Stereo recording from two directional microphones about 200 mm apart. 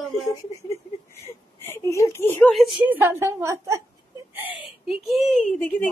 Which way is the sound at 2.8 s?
10° right (ahead or behind).